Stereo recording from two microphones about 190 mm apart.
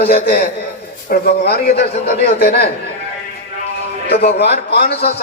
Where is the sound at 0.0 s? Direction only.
55° left (ahead or behind).